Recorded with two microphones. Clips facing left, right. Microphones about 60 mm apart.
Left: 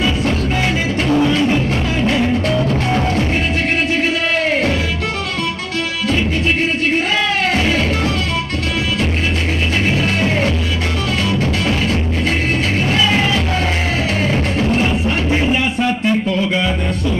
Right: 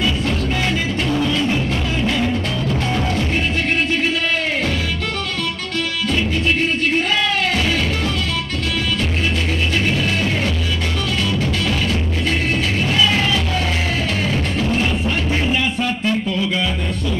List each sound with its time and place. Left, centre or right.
0.0 s music: centre
2.5 s music: left
7.5 s music: left
9.9 s music: left
13.0 s music: centre
14.2 s music: left
14.8 s a sound: centre